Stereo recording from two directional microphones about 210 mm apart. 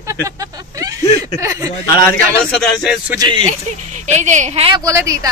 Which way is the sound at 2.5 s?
Centre (ahead or behind).